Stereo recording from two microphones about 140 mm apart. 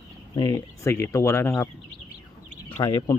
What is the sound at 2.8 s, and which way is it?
Speech, 30° left (ahead or behind).